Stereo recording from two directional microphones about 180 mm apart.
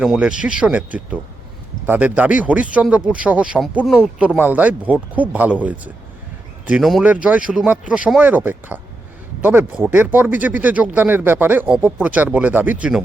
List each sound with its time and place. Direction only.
0.0 s speech: 5° right (ahead or behind)